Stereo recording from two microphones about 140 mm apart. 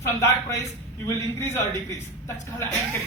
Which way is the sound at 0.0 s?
20° left (ahead or behind).